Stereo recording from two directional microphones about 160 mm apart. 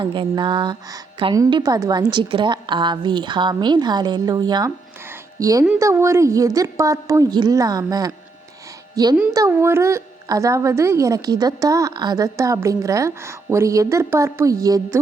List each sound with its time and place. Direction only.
0.0 s a woman's voice: 30° right (ahead or behind)
5.0 s music: 15° right (ahead or behind)
5.8 s a woman's voice: 15° right (ahead or behind)